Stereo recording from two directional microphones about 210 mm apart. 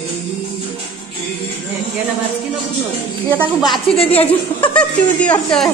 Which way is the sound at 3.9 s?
30° left (ahead or behind).